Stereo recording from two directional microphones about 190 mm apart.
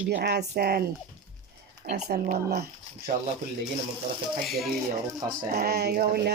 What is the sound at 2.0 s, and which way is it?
Speech, 45° right (ahead or behind).